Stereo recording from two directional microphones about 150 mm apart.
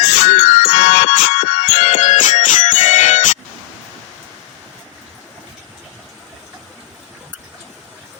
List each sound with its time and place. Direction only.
0.0 s music: 50° left (ahead or behind)